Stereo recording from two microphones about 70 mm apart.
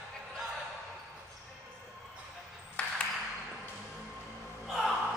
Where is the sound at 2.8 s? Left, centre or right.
Centre.